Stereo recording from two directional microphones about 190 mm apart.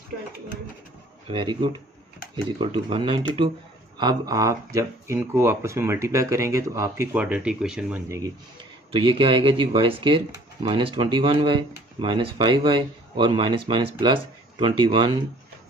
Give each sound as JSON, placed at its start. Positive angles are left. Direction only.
{"t": 1.2, "sound": "speech", "side_deg": -25}
{"t": 8.1, "sound": "speech", "side_deg": -20}
{"t": 8.9, "sound": "speech", "side_deg": -30}